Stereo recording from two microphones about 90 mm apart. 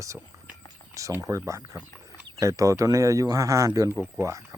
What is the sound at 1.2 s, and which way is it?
Speech, 35° right (ahead or behind).